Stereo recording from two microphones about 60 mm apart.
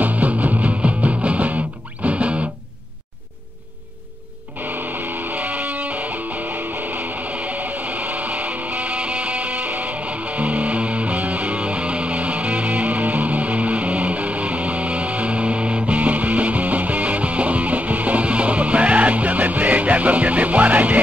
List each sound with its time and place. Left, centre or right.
0.0 s music: right
4.6 s music: right